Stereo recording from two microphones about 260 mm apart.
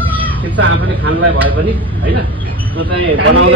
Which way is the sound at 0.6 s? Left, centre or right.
Right.